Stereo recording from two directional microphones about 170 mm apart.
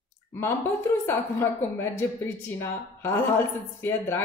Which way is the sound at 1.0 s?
15° left (ahead or behind).